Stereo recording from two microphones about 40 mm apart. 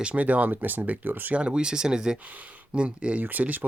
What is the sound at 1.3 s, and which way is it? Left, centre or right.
Speech, right.